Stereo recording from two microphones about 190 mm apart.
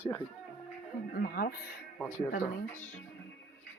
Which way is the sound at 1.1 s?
50° left (ahead or behind).